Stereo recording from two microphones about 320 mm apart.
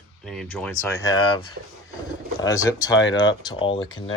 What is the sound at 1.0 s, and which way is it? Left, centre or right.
Speech, centre.